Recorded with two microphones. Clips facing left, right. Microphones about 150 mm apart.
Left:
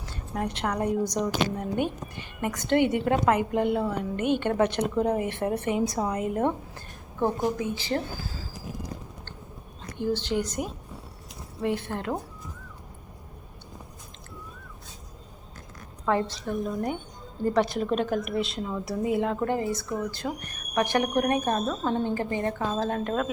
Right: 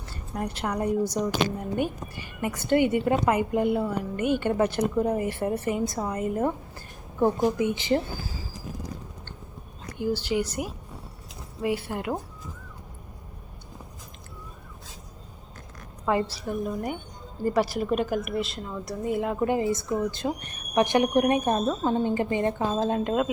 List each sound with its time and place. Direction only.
0.0 s a woman's voice: centre (ahead or behind)
7.6 s speech: 20° right (ahead or behind)
10.0 s a woman's voice: 10° right (ahead or behind)
16.0 s a woman's voice: 5° right (ahead or behind)